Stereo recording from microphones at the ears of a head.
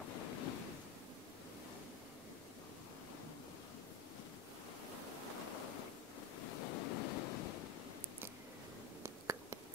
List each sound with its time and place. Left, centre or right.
0.0 s waves: left
5.5 s waves: left